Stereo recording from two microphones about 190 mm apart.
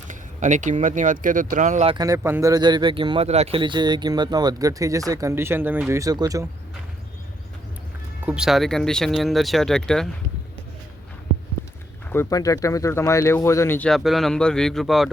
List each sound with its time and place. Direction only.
0.1 s speech: 40° right (ahead or behind)
1.9 s speech: 20° right (ahead or behind)
8.2 s speech: 5° right (ahead or behind)
12.0 s speech: 10° left (ahead or behind)